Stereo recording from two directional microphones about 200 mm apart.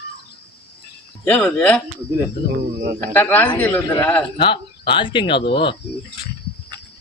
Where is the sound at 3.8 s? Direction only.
20° left (ahead or behind).